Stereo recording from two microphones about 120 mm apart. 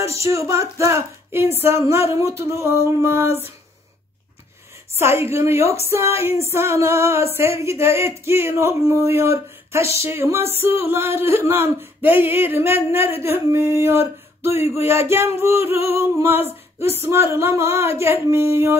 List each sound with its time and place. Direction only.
0.0 s a sound: 25° right (ahead or behind)
2.1 s speech: 20° right (ahead or behind)
4.9 s speech: 20° right (ahead or behind)